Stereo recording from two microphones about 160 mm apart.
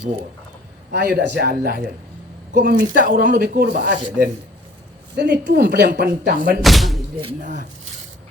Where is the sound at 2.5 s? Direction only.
70° right (ahead or behind).